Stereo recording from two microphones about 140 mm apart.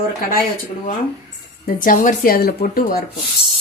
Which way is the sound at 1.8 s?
75° left (ahead or behind).